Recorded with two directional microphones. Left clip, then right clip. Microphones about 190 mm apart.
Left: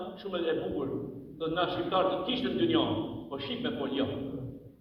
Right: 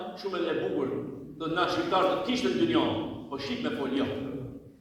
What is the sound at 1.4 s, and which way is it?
A man's voice, 45° right (ahead or behind).